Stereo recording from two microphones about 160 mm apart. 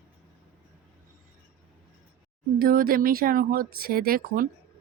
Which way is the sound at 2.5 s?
65° right (ahead or behind).